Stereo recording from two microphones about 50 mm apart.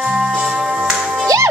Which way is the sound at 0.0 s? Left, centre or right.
Centre.